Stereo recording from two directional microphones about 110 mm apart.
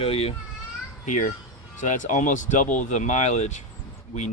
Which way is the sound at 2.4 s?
90° left.